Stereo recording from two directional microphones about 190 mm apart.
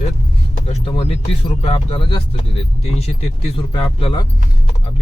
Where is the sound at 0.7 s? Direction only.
30° left (ahead or behind).